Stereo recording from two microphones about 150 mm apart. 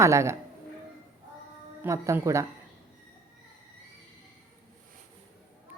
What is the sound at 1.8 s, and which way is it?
Speech, 20° right (ahead or behind).